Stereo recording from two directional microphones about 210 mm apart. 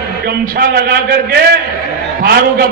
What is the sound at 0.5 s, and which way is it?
A man's voice, 50° right (ahead or behind).